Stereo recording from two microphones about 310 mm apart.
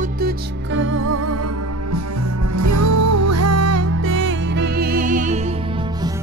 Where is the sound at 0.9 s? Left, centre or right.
Right.